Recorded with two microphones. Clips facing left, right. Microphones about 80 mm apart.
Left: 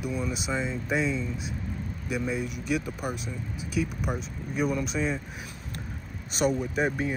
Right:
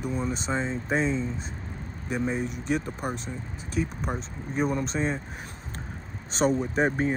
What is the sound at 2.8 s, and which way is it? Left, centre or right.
Speech, centre.